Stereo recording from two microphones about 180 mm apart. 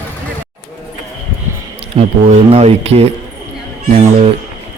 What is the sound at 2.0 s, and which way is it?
Speech, 35° right (ahead or behind).